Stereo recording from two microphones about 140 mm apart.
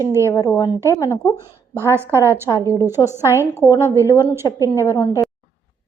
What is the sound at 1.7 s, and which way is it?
A woman's voice, 15° right (ahead or behind).